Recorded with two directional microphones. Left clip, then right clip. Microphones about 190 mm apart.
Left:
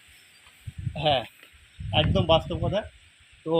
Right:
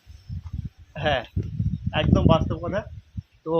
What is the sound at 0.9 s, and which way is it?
Speech, 10° left (ahead or behind).